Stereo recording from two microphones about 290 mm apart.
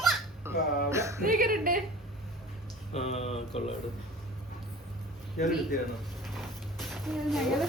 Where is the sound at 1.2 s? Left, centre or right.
Right.